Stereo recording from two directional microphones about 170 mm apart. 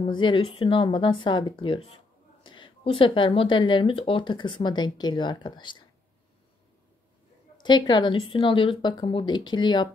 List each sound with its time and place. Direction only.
0.0 s speech: 30° left (ahead or behind)
7.6 s speech: 25° left (ahead or behind)